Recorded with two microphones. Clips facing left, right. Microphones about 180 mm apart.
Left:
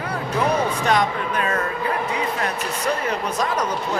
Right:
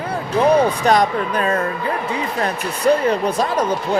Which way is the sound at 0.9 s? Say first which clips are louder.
Right 4 dB; 35° right (ahead or behind).